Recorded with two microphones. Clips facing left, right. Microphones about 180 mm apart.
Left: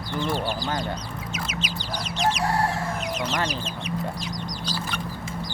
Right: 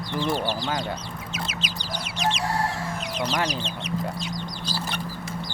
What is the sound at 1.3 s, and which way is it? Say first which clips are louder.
Chicken: left 1 dB; 35° right (ahead or behind).